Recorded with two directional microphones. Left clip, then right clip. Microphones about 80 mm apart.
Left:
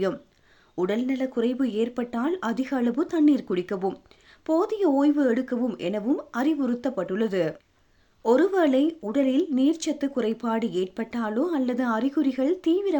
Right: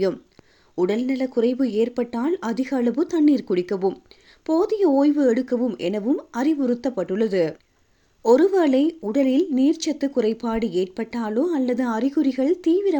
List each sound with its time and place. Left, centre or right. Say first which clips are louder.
0.8 s speech: right 4 dB; right